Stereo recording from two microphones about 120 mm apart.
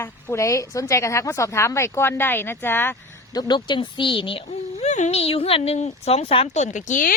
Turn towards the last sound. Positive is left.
turn(degrees=90)